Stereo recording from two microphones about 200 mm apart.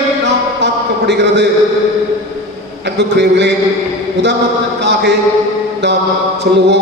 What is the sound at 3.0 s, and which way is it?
Speech, 60° right (ahead or behind).